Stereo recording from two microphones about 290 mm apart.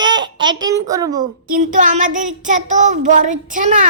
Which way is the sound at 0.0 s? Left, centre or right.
Centre.